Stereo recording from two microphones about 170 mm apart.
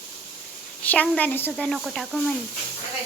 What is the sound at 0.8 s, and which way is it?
A child's voice, 5° left (ahead or behind).